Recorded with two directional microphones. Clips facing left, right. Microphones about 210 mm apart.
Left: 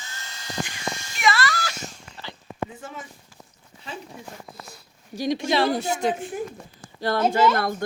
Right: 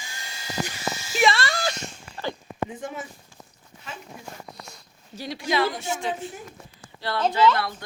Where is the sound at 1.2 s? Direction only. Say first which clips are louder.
Even; 25° right (ahead or behind).